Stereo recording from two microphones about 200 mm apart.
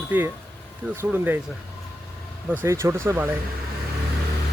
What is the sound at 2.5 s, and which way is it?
Speech, 10° right (ahead or behind).